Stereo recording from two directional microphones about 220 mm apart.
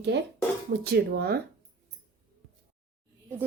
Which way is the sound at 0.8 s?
45° right (ahead or behind).